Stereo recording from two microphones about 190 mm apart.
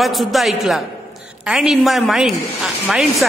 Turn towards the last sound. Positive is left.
turn(degrees=0)  # may be behind; listen again after turning